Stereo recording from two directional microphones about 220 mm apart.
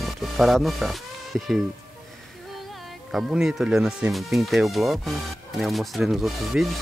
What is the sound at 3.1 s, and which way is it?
Speech, centre (ahead or behind).